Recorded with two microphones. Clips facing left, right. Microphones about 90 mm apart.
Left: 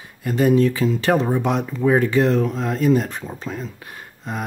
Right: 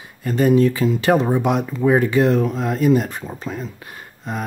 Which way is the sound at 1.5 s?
10° right (ahead or behind).